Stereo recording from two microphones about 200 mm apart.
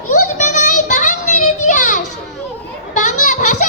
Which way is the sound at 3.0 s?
40° left (ahead or behind).